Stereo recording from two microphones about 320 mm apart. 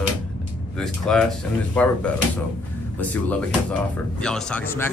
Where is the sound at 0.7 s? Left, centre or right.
Centre.